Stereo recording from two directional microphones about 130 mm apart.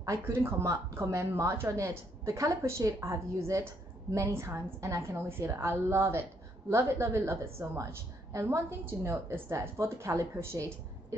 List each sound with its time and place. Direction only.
0.0 s a woman's voice: 25° right (ahead or behind)